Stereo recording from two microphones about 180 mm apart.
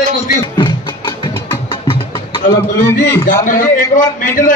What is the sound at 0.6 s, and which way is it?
Music, 25° left (ahead or behind).